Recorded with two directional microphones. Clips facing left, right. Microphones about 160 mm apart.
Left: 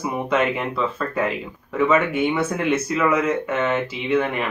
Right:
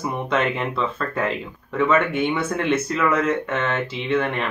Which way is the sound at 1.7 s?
10° left (ahead or behind).